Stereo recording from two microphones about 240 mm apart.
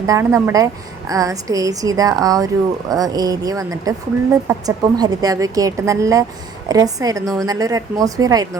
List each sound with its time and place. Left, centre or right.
0.0 s a woman's voice: centre